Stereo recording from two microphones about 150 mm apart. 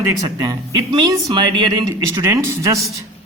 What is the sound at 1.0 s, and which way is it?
Speech, 25° right (ahead or behind).